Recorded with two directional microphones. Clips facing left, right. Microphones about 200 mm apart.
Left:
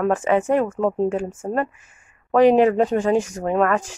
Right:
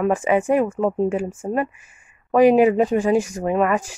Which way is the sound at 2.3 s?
10° right (ahead or behind).